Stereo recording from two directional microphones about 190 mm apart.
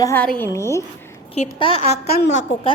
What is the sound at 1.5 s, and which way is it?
Speech, 25° left (ahead or behind).